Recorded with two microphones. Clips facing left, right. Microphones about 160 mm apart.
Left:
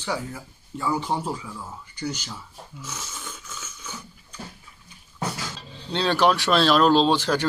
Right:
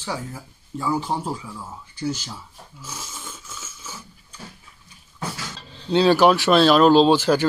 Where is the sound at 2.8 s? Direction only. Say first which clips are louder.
Right 1 dB; 10° right (ahead or behind).